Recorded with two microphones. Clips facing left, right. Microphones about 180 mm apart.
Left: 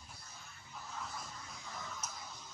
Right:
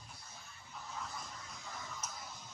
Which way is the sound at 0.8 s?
Centre (ahead or behind).